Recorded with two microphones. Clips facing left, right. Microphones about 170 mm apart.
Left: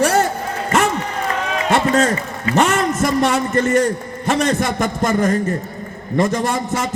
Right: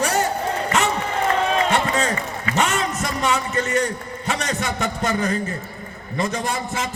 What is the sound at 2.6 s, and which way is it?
A man's voice, 55° left (ahead or behind).